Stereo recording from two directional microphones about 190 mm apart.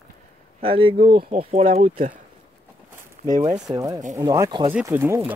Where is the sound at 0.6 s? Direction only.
30° right (ahead or behind).